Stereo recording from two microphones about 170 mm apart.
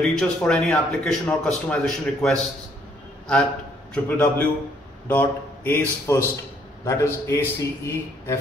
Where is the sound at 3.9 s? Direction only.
10° left (ahead or behind).